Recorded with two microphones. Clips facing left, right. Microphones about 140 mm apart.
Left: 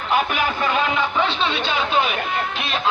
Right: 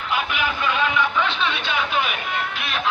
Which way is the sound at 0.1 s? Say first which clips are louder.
Left 4 dB; 45° left (ahead or behind).